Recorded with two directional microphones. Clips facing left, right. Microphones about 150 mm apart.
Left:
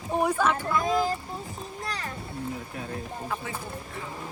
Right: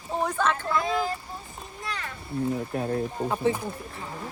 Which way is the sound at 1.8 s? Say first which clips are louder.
Even; 40° left (ahead or behind).